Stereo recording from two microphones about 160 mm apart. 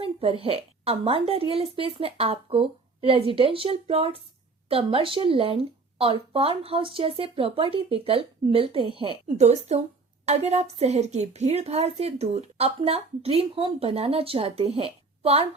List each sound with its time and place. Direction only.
0.0 s a woman's voice: 35° right (ahead or behind)